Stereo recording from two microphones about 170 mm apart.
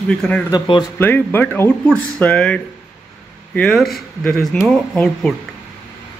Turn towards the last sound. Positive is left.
turn(degrees=5)  # may be behind; listen again after turning